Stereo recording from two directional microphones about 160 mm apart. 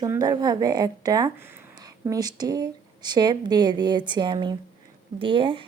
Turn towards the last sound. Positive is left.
turn(degrees=-30)  # may be behind; listen again after turning